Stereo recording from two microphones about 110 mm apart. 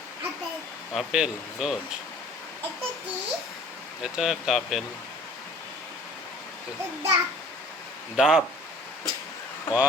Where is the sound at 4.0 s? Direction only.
5° right (ahead or behind).